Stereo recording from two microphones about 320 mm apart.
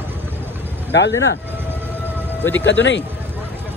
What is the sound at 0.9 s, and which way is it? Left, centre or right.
Speech, left.